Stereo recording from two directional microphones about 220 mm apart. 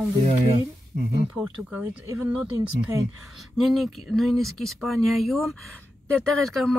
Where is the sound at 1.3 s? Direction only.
5° right (ahead or behind).